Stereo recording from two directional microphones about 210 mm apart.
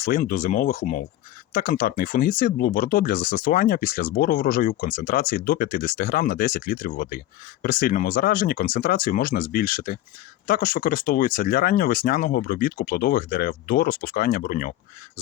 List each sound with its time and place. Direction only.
0.0 s speech: 40° left (ahead or behind)